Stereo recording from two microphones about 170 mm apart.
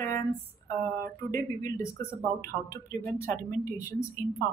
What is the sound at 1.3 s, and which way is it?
Speech, 20° left (ahead or behind).